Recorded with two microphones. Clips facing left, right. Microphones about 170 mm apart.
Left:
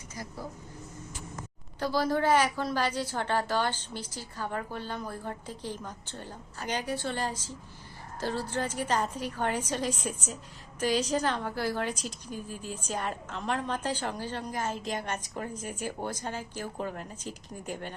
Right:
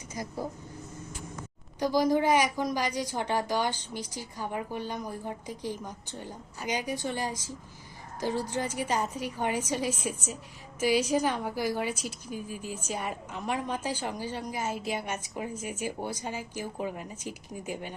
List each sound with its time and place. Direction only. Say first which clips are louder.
0.1 s speech: right 5 dB; 15° right (ahead or behind)
1.8 s a woman's voice: right 3 dB; 15° right (ahead or behind)